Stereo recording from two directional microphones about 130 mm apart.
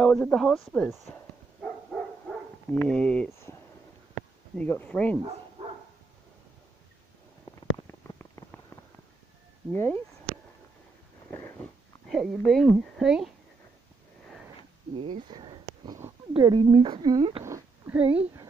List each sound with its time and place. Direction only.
0.0 s speech: 10° left (ahead or behind)
1.1 s dog: 5° left (ahead or behind)
2.7 s speech: 10° left (ahead or behind)
4.6 s speech: 15° left (ahead or behind)
7.4 s a sound: 20° left (ahead or behind)
9.7 s speech: 15° left (ahead or behind)
11.3 s a sound: 15° left (ahead or behind)
12.1 s a woman's voice: centre (ahead or behind)
15.0 s a sound: 40° right (ahead or behind)
16.3 s speech: 35° right (ahead or behind)
17.4 s a sound: 20° right (ahead or behind)
17.9 s speech: 10° right (ahead or behind)